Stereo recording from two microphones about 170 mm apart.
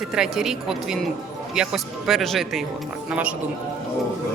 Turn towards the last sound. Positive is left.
turn(degrees=-5)  # may be behind; listen again after turning